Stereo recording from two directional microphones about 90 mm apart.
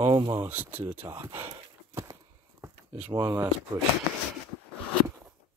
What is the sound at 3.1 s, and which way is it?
Speech, 35° right (ahead or behind).